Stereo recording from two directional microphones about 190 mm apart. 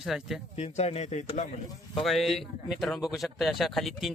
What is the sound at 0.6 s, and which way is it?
Speech, 35° left (ahead or behind).